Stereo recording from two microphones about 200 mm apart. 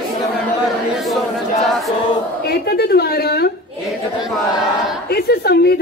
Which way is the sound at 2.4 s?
50° left (ahead or behind).